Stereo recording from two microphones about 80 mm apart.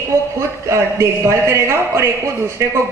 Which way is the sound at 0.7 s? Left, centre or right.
Right.